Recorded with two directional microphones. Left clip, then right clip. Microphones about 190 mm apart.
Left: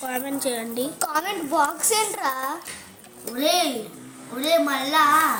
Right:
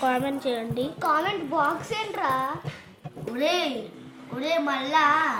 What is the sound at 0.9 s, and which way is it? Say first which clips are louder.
A woman's voice: right 3 dB; 40° left (ahead or behind).